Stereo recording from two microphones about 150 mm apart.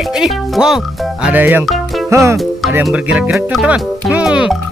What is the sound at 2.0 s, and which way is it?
Music, 20° right (ahead or behind).